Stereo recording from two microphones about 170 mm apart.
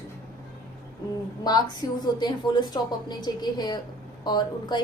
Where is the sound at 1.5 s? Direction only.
25° left (ahead or behind).